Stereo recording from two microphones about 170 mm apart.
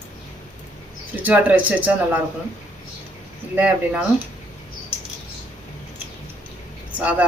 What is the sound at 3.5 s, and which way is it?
Speech, 5° right (ahead or behind).